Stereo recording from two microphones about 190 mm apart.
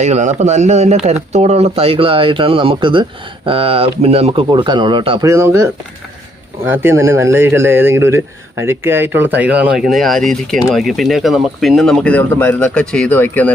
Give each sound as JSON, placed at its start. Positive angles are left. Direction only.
{"t": 0.0, "sound": "speech", "side_deg": -40}
{"t": 5.3, "sound": "speech", "side_deg": -15}
{"t": 6.7, "sound": "speech", "side_deg": -15}